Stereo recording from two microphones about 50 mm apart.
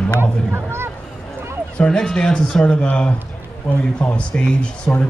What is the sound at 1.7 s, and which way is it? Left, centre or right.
Speech, centre.